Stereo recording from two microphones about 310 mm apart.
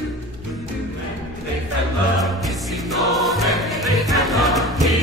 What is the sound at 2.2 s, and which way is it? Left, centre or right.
Music, centre.